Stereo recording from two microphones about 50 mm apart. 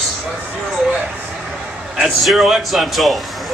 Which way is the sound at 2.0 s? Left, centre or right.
Centre.